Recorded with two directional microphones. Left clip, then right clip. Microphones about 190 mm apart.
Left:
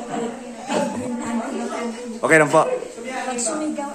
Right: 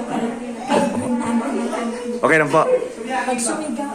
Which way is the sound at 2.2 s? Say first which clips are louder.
Even; 15° left (ahead or behind).